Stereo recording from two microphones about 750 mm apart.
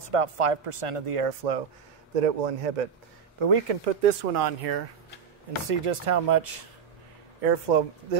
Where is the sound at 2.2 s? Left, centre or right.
Right.